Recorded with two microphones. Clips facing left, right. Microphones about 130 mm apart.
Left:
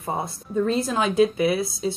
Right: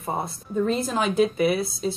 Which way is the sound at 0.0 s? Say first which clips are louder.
Left 1 dB; centre (ahead or behind).